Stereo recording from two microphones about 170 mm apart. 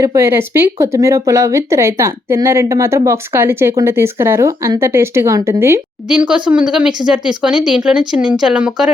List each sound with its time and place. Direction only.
0.0 s speech: 15° right (ahead or behind)